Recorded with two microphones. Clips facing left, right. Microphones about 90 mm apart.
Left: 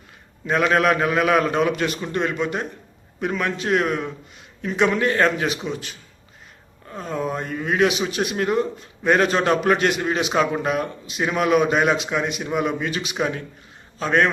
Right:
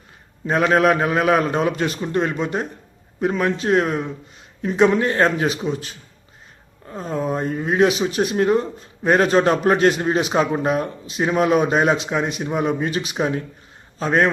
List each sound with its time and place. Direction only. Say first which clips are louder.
0.4 s a man's voice: right 2 dB; 30° right (ahead or behind)